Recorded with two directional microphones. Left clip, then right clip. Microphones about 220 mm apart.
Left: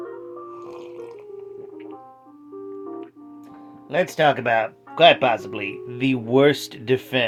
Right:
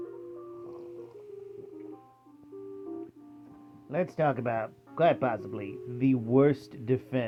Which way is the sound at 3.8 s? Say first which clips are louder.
Left 10 dB; 10° left (ahead or behind).